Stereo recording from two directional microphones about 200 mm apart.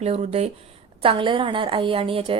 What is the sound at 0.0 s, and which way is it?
A woman's voice, 30° right (ahead or behind).